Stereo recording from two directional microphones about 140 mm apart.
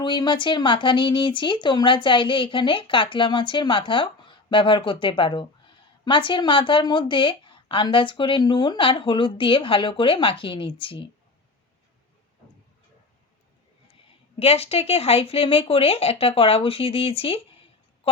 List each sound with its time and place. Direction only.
0.0 s speech: 35° left (ahead or behind)
14.3 s speech: 45° left (ahead or behind)
18.0 s music: 40° left (ahead or behind)